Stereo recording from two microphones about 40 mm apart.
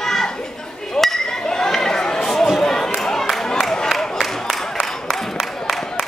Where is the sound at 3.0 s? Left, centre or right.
Centre.